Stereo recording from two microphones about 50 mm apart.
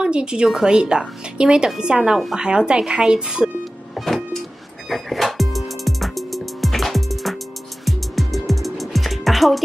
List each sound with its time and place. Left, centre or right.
0.0 s a woman's voice: centre
3.9 s vehicle: centre
4.8 s music: centre